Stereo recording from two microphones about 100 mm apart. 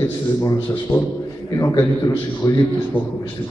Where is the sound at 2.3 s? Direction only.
45° left (ahead or behind).